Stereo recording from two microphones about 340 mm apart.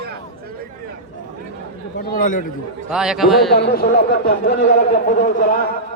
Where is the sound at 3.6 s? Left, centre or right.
Left.